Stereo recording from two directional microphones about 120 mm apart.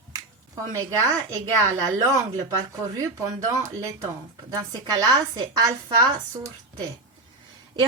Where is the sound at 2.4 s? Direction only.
25° right (ahead or behind).